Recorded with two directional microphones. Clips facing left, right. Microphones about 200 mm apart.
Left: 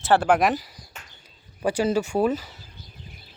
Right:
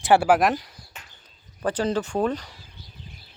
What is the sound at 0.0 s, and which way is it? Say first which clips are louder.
Speech: right 1 dB; 10° right (ahead or behind).